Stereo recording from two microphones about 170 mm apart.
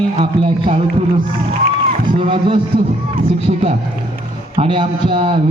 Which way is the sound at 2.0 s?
30° right (ahead or behind).